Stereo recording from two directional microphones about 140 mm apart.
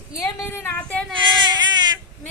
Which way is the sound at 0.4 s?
10° left (ahead or behind).